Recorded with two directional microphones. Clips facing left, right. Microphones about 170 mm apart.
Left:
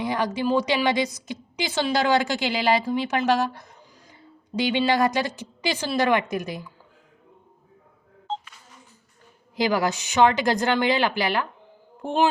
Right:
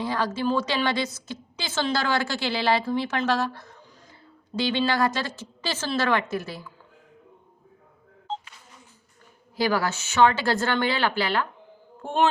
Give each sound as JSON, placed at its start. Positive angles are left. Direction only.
{"t": 0.0, "sound": "a woman's voice", "side_deg": 15}
{"t": 9.6, "sound": "a woman's voice", "side_deg": 15}